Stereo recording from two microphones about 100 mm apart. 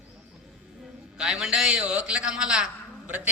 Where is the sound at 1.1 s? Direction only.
5° right (ahead or behind).